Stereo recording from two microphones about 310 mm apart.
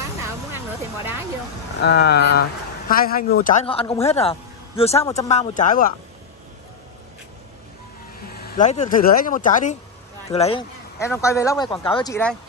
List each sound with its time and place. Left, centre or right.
1.8 s a man's voice: left
8.3 s a man's voice: left
11.0 s speech: centre